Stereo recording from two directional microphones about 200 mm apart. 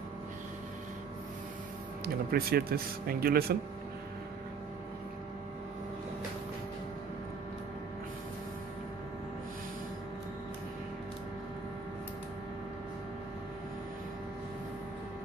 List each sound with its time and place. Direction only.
2.3 s speech: 50° right (ahead or behind)